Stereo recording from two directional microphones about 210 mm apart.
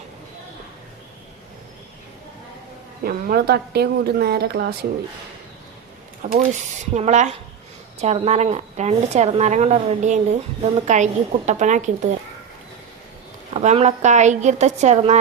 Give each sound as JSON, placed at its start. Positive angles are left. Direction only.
{"t": 3.0, "sound": "a woman's voice", "side_deg": -45}
{"t": 6.3, "sound": "a woman's voice", "side_deg": -30}
{"t": 13.5, "sound": "a woman's voice", "side_deg": -35}